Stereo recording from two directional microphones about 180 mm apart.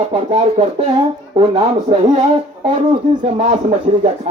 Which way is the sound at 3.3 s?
40° right (ahead or behind).